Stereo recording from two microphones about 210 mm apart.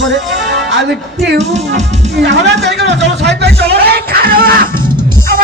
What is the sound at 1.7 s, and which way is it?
Music, 30° right (ahead or behind).